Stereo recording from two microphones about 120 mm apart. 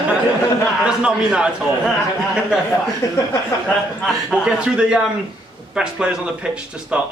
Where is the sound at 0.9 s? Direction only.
10° right (ahead or behind).